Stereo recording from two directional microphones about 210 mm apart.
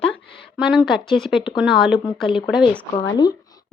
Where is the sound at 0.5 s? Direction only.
5° right (ahead or behind).